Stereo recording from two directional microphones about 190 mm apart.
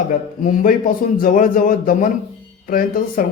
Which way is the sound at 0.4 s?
45° left (ahead or behind).